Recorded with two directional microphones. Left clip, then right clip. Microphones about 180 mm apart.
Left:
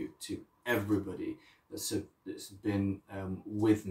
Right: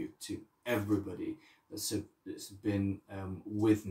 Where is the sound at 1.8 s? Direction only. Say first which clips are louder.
Left 1 dB; 5° right (ahead or behind).